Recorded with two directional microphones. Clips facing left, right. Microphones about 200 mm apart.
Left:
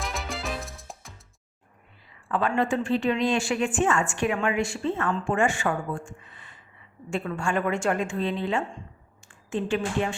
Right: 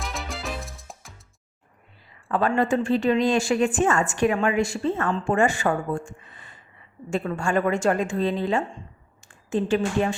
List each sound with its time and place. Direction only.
0.0 s music: centre (ahead or behind)
2.3 s a woman's voice: 40° right (ahead or behind)